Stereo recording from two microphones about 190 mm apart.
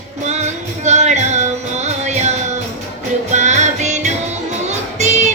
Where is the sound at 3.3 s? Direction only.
40° right (ahead or behind).